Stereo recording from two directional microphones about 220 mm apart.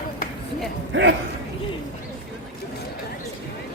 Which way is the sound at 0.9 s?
55° right (ahead or behind).